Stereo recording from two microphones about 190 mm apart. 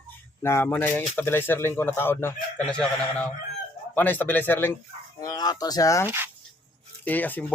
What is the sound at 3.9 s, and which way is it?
Speech, 10° left (ahead or behind).